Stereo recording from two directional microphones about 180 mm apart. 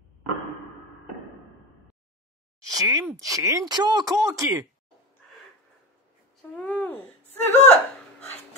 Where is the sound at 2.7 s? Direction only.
20° right (ahead or behind).